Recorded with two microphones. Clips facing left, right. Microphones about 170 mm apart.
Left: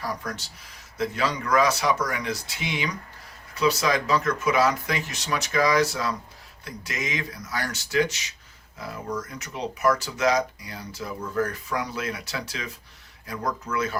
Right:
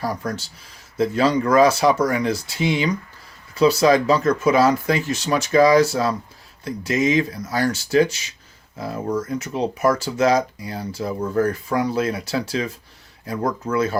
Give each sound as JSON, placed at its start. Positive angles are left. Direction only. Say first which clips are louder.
{"t": 0.0, "sound": "speech", "louder": "right 6 dB", "side_deg": -30}